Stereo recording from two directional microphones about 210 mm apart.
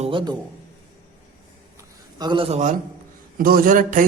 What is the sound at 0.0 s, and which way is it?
Speech, 25° right (ahead or behind).